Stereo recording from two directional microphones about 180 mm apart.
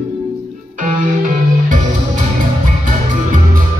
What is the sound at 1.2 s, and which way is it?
Music, 45° right (ahead or behind).